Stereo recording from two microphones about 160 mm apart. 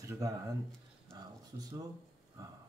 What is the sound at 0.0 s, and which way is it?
Speech, 20° right (ahead or behind).